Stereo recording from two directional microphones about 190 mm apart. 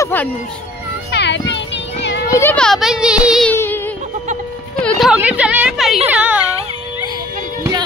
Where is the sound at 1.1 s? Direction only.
65° left (ahead or behind).